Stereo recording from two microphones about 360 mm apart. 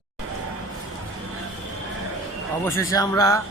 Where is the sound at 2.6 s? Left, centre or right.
Centre.